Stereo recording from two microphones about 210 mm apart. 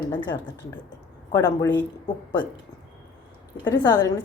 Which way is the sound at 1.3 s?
20° left (ahead or behind).